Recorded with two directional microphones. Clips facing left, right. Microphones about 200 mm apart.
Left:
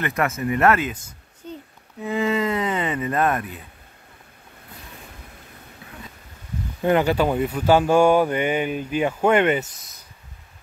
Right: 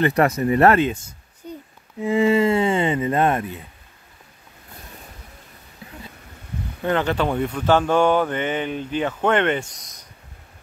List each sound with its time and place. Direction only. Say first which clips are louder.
0.0 s speech: right 6 dB; 35° right (ahead or behind)
1.4 s a sound: right 1 dB; 10° right (ahead or behind)
2.0 s speech: right 5 dB; 30° right (ahead or behind)
6.8 s speech: left 3 dB; 10° left (ahead or behind)